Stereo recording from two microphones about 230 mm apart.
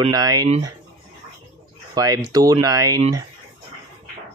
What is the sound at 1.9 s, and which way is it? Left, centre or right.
Speech, centre.